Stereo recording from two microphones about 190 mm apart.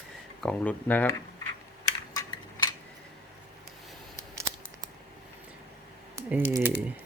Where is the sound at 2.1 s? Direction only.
20° left (ahead or behind).